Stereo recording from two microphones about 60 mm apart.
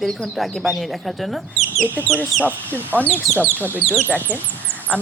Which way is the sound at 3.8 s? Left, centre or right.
Centre.